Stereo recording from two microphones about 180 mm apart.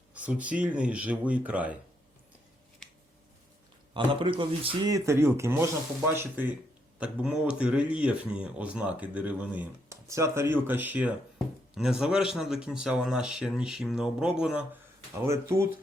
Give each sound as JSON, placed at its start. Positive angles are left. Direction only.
{"t": 0.1, "sound": "speech", "side_deg": -5}
{"t": 3.9, "sound": "speech", "side_deg": -30}